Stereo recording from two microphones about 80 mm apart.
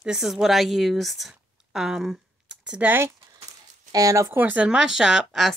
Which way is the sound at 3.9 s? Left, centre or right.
Right.